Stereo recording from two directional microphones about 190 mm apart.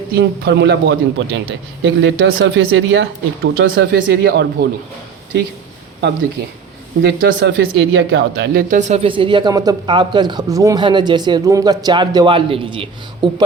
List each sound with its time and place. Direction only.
0.1 s a man's voice: 60° right (ahead or behind)
7.0 s speech: 75° right (ahead or behind)
8.7 s speech: 40° right (ahead or behind)